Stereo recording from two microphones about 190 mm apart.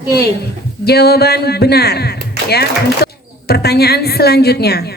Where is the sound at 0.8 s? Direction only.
55° left (ahead or behind).